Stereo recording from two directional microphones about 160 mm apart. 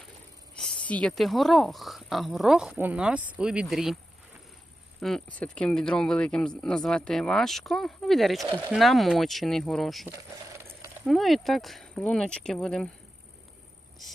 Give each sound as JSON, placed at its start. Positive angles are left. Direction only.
{"t": 0.5, "sound": "speech", "side_deg": 5}
{"t": 4.9, "sound": "speech", "side_deg": 0}
{"t": 10.1, "sound": "vehicle", "side_deg": -20}
{"t": 11.0, "sound": "speech", "side_deg": 0}